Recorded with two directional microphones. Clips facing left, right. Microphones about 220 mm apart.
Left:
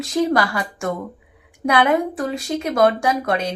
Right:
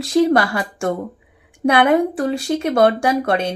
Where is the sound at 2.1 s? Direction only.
30° right (ahead or behind).